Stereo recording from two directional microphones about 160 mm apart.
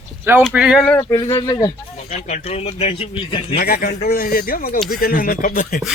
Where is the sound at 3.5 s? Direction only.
75° left (ahead or behind).